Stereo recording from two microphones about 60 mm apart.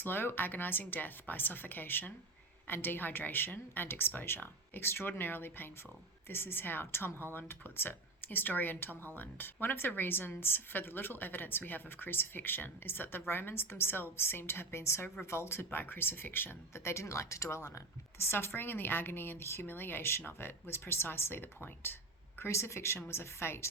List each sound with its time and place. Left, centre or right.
0.0 s speech: left
18.3 s speech: left